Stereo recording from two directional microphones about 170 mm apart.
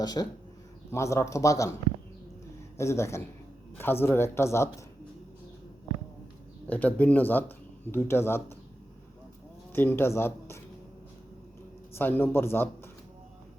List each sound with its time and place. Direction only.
0.0 s speech: 25° left (ahead or behind)
2.7 s speech: 15° left (ahead or behind)
6.7 s speech: 10° left (ahead or behind)
9.7 s speech: 15° left (ahead or behind)
11.9 s speech: 10° left (ahead or behind)